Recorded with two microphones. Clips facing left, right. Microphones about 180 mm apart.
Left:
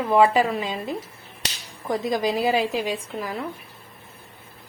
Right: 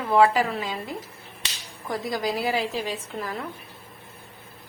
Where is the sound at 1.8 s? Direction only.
20° left (ahead or behind).